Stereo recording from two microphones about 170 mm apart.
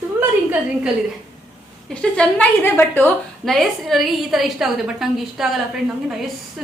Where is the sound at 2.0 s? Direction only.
5° left (ahead or behind).